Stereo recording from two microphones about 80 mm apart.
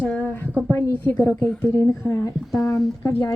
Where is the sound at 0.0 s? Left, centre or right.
Centre.